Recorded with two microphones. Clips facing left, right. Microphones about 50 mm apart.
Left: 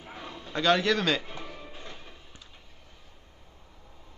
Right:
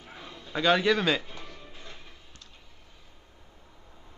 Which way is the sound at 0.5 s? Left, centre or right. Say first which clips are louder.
Right 1 dB; centre.